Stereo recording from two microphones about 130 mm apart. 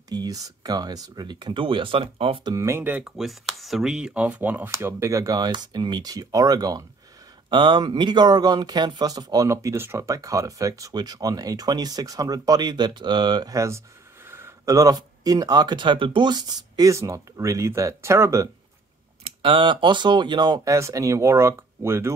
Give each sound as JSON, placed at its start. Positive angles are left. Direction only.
{"t": 0.1, "sound": "speech", "side_deg": -30}
{"t": 2.5, "sound": "speech", "side_deg": -20}
{"t": 3.2, "sound": "speech", "side_deg": 0}
{"t": 19.2, "sound": "speech", "side_deg": -40}